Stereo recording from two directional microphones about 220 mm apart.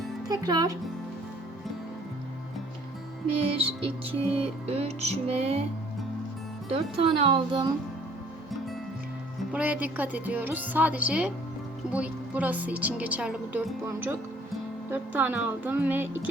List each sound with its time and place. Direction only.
0.3 s a woman's voice: 15° right (ahead or behind)
3.6 s music: 25° right (ahead or behind)
6.7 s music: 25° right (ahead or behind)
9.5 s a woman's voice: 5° right (ahead or behind)